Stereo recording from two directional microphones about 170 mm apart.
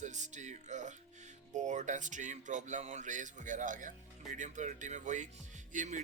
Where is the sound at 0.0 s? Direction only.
45° right (ahead or behind).